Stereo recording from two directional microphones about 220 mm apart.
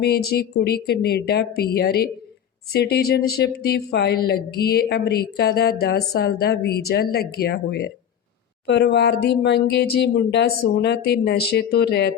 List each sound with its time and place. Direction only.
0.0 s speech: 45° left (ahead or behind)